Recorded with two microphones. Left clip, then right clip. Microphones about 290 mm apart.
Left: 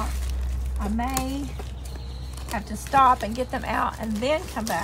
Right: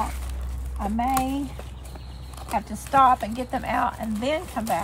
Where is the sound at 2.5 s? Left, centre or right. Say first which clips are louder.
Right 1 dB; centre.